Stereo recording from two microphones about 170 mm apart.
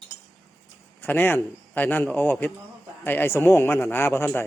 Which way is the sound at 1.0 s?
10° left (ahead or behind).